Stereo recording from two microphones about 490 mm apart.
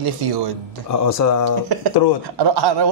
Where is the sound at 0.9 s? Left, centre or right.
Left.